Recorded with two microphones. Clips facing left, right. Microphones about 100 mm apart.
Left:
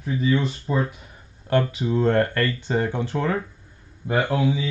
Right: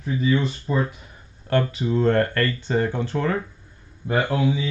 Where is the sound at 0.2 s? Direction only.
Centre (ahead or behind).